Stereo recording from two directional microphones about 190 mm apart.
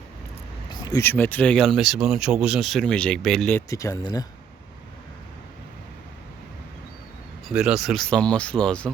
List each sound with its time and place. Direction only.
0.7 s speech: 20° left (ahead or behind); by 3.6 s 5° left (ahead or behind)
3.7 s speech: 15° left (ahead or behind)
7.4 s speech: centre (ahead or behind)